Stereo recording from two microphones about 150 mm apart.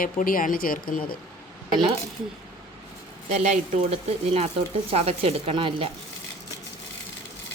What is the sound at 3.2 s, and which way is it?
Speech, 50° right (ahead or behind).